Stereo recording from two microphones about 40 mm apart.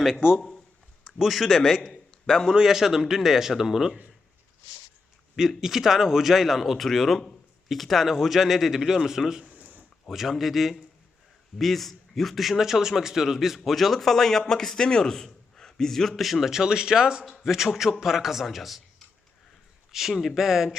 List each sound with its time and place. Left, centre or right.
0.3 s a man's voice: centre
1.0 s speech: centre
1.8 s a sound: centre
2.5 s speech: centre
5.4 s speech: centre
9.4 s a sound: right
10.1 s a man's voice: centre
16.6 s a man's voice: centre
19.9 s speech: centre